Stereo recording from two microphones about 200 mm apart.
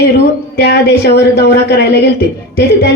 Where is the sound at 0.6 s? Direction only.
55° left (ahead or behind).